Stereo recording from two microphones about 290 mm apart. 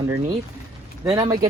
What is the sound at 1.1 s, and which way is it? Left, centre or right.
Speech, centre.